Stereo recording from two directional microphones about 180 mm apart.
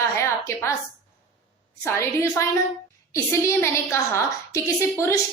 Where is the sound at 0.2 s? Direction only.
15° left (ahead or behind).